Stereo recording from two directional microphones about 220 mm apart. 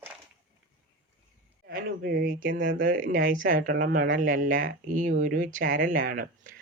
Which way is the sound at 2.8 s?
40° right (ahead or behind).